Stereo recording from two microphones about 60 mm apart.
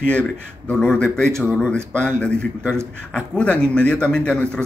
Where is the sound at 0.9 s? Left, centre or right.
Centre.